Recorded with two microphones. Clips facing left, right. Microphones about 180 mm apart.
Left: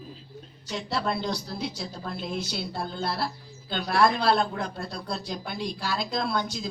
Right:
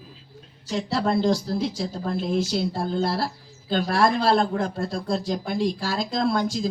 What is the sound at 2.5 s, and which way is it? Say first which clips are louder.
Speech: right 8 dB; 45° right (ahead or behind).